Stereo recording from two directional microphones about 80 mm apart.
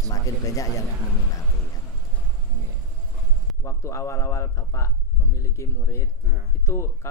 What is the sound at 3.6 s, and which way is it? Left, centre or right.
A man's voice, left.